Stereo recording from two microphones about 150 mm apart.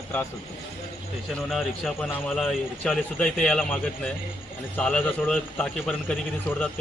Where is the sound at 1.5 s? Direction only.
Centre (ahead or behind).